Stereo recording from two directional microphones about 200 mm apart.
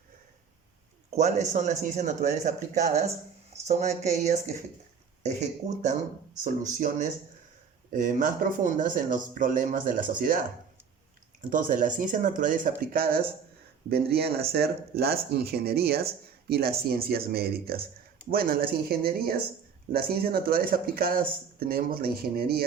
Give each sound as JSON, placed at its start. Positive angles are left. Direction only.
{"t": 1.1, "sound": "speech", "side_deg": -35}
{"t": 11.4, "sound": "speech", "side_deg": -45}